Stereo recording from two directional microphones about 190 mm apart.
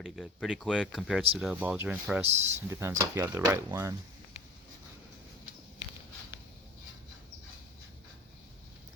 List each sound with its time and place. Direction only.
0.0 s speech: centre (ahead or behind)
2.2 s speech: 35° right (ahead or behind)
2.6 s speech: 15° right (ahead or behind)